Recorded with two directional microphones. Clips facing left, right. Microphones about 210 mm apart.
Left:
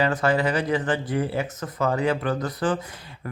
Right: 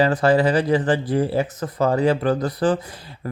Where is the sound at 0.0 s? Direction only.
35° right (ahead or behind).